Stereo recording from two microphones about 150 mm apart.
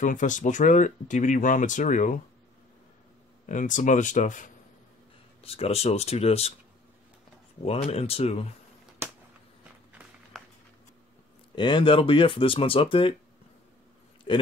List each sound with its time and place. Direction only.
0.0 s speech: 60° left (ahead or behind)
3.4 s speech: 60° left (ahead or behind)
5.4 s speech: 40° left (ahead or behind)
7.6 s speech: 40° left (ahead or behind)
10.3 s a sound: centre (ahead or behind)
11.5 s speech: 30° left (ahead or behind)
14.3 s a man's voice: 35° left (ahead or behind)